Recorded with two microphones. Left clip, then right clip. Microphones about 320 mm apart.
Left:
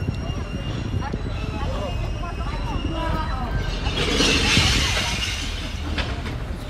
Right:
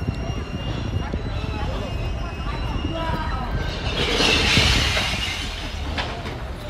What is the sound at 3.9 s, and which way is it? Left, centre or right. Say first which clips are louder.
Vehicle: right 1 dB; right.